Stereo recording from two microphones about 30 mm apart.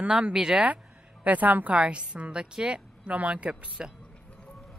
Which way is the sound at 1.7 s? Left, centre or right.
Right.